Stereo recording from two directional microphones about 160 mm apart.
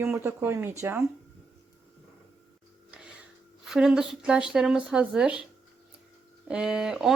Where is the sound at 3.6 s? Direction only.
5° right (ahead or behind).